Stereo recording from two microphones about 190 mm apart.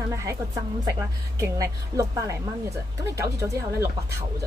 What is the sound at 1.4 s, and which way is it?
A woman's voice, 15° right (ahead or behind).